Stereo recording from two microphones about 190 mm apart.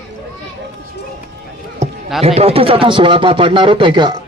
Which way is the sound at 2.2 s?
30° right (ahead or behind).